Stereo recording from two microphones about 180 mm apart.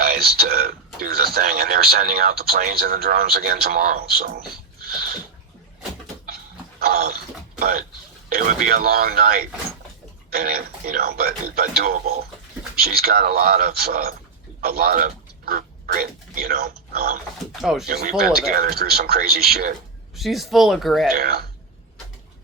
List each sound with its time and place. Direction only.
0.0 s a sound: 60° right (ahead or behind)
0.9 s speech: 55° right (ahead or behind)
6.7 s a sound: 55° right (ahead or behind)
7.6 s speech: 55° right (ahead or behind)
17.6 s speech: centre (ahead or behind)
17.8 s speech: 55° right (ahead or behind)
20.1 s speech: centre (ahead or behind)
21.1 s speech: 60° right (ahead or behind)